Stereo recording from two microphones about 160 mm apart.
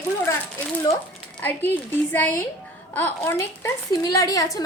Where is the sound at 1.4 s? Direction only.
10° left (ahead or behind).